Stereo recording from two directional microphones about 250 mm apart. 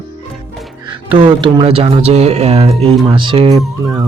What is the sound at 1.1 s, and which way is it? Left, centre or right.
Speech, centre.